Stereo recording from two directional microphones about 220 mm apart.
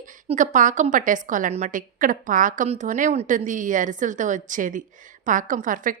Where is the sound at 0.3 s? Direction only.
35° right (ahead or behind).